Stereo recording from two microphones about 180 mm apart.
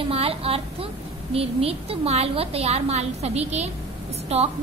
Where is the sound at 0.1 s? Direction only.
35° right (ahead or behind).